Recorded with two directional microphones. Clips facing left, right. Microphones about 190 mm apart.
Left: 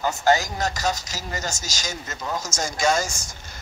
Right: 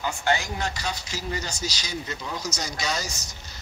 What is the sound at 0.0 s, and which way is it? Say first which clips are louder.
Speech: left 5 dB; 40° left (ahead or behind).